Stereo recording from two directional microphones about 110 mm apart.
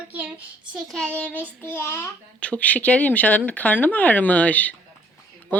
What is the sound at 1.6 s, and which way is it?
A child's voice, 20° left (ahead or behind).